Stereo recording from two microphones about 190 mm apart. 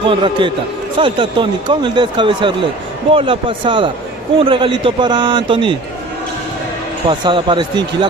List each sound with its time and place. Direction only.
0.0 s a man's voice: 25° right (ahead or behind)
7.1 s a man's voice: 25° right (ahead or behind)